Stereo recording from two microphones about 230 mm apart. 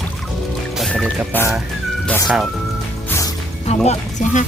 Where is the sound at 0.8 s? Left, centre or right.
Centre.